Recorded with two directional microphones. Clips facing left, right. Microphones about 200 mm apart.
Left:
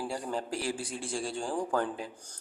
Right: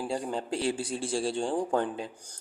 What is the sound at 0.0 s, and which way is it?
A man's voice, 20° right (ahead or behind).